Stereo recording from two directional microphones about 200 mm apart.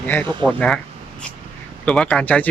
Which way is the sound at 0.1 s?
10° left (ahead or behind).